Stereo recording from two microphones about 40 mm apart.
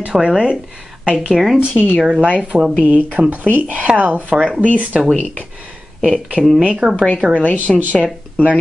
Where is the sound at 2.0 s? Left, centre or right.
Right.